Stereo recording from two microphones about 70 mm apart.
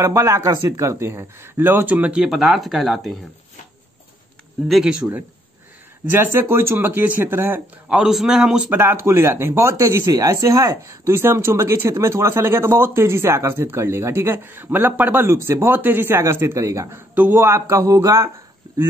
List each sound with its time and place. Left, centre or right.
0.0 s speech: right
1.9 s speech: centre
2.2 s speech: centre
4.6 s speech: centre
6.1 s speech: right
8.0 s speech: centre
8.6 s speech: right
10.0 s speech: right
10.9 s speech: right
16.9 s a man's voice: right
17.4 s speech: right